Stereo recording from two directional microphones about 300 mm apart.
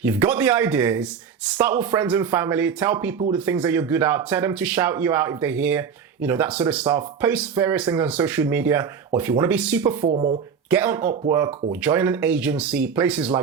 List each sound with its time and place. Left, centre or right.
0.0 s speech: centre
10.1 s speech: right
10.7 s speech: centre